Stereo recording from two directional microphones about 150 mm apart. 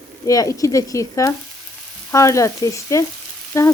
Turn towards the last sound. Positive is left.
turn(degrees=20)  # may be behind; listen again after turning